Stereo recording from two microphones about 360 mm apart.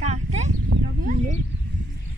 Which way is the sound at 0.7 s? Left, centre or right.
Right.